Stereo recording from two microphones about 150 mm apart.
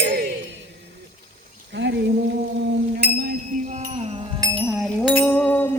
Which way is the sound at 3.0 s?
90° right.